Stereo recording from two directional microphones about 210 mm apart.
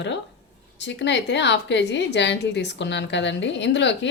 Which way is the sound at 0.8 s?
55° left (ahead or behind).